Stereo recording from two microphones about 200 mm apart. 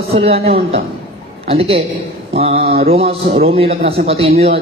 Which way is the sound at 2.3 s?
30° right (ahead or behind).